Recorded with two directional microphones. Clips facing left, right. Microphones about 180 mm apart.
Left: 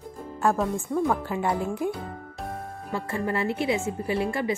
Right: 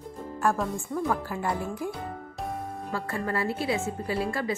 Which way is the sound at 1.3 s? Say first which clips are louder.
Left 4 dB; 20° left (ahead or behind).